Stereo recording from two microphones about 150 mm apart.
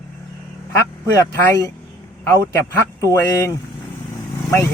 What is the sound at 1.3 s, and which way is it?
Speech, 20° left (ahead or behind).